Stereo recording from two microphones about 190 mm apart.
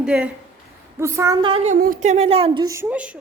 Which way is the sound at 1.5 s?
35° right (ahead or behind).